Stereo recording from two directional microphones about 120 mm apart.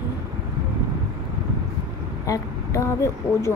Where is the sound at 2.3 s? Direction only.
25° left (ahead or behind).